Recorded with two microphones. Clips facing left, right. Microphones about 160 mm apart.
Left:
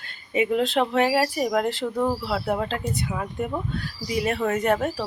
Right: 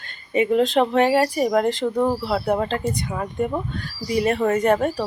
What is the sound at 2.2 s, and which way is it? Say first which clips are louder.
Speech: right 4 dB; centre (ahead or behind).